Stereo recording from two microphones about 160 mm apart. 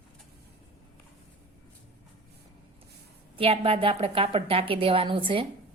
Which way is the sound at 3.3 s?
35° right (ahead or behind).